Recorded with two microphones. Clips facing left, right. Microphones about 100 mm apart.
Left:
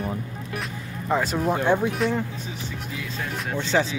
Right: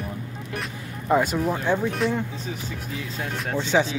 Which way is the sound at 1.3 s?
15° left (ahead or behind).